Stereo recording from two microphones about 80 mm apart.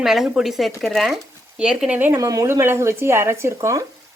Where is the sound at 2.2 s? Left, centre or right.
Right.